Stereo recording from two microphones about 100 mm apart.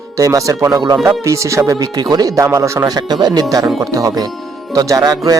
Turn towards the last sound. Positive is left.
turn(degrees=-35)  # may be behind; listen again after turning